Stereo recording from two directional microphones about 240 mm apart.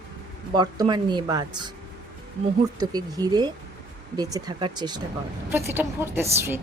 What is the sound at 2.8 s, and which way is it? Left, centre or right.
A woman's voice, centre.